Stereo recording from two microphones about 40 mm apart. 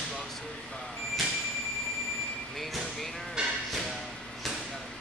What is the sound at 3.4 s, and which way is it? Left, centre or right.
Speech, right.